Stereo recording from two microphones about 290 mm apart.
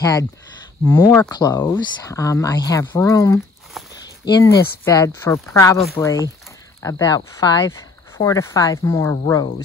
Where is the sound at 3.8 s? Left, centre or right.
Centre.